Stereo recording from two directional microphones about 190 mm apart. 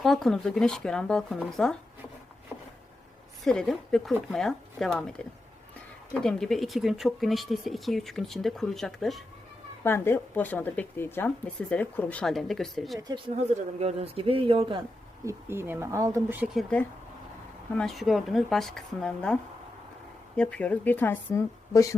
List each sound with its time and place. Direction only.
0.0 s speech: centre (ahead or behind)
2.5 s a sound: 5° right (ahead or behind)
3.4 s speech: 5° left (ahead or behind)
6.2 s speech: centre (ahead or behind)
9.8 s a woman's voice: 10° left (ahead or behind)
13.0 s speech: 25° right (ahead or behind)
15.2 s speech: 15° right (ahead or behind)
17.7 s a woman's voice: centre (ahead or behind); by 21.9 s 15° left (ahead or behind)